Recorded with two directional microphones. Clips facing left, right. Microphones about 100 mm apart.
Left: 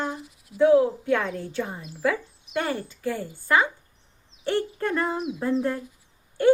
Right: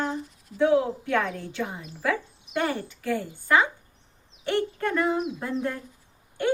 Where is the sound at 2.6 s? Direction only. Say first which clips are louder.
Even; 15° left (ahead or behind).